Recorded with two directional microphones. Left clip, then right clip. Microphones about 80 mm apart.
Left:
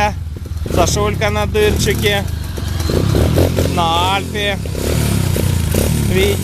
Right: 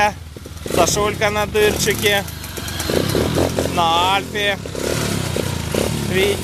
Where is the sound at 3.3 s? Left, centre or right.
Left.